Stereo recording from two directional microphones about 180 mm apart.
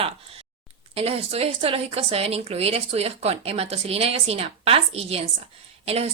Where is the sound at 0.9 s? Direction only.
35° right (ahead or behind).